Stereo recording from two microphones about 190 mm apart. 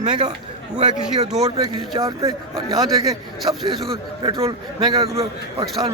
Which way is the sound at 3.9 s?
30° right (ahead or behind).